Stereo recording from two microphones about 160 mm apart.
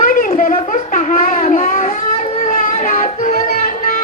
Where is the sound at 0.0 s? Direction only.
60° left (ahead or behind).